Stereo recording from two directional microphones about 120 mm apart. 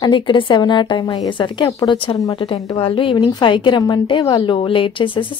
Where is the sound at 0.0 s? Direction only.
40° left (ahead or behind).